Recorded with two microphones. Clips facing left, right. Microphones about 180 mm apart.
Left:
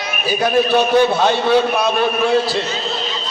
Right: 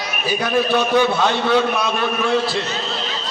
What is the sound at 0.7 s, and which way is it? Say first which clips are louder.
Speech: left 1 dB; 35° left (ahead or behind).